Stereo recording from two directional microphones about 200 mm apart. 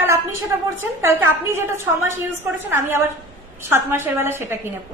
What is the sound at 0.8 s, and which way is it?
A woman's voice, 10° right (ahead or behind).